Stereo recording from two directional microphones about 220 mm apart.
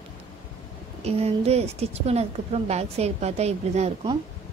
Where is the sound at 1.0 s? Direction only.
30° right (ahead or behind).